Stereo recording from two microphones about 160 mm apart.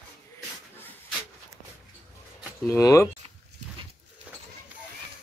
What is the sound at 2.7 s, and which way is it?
Speech, 20° left (ahead or behind).